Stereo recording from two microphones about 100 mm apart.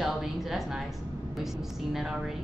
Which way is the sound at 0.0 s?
5° right (ahead or behind).